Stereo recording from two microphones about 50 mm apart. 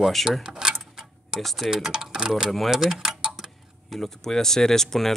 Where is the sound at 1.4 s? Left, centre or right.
Centre.